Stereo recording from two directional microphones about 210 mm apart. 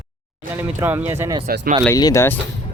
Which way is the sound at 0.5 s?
10° right (ahead or behind).